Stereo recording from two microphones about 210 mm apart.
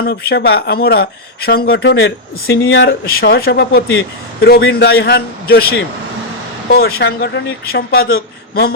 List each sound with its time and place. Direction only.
0.0 s speech: 50° left (ahead or behind)